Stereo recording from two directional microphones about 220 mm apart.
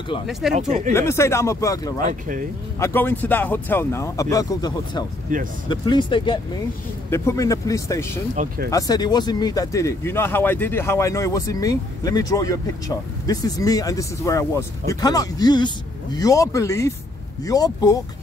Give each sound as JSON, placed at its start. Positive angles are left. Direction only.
{"t": 0.3, "sound": "speech", "side_deg": 0}
{"t": 0.6, "sound": "speech", "side_deg": -30}
{"t": 0.9, "sound": "speech", "side_deg": 10}
{"t": 2.0, "sound": "speech", "side_deg": -40}
{"t": 2.8, "sound": "speech", "side_deg": 10}
{"t": 5.3, "sound": "speech", "side_deg": -40}
{"t": 5.7, "sound": "speech", "side_deg": 20}